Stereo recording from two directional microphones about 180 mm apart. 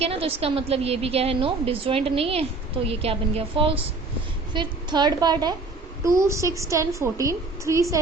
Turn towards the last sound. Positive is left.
turn(degrees=-15)  # may be behind; listen again after turning